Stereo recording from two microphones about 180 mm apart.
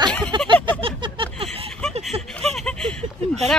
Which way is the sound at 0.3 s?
25° right (ahead or behind).